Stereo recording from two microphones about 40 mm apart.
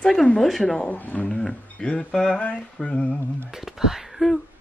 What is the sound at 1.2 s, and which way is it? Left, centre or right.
Speech, centre.